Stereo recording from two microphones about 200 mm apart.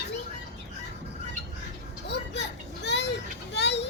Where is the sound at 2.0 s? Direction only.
60° left (ahead or behind).